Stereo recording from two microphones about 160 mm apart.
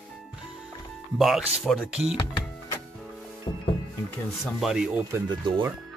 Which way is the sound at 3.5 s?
25° left (ahead or behind).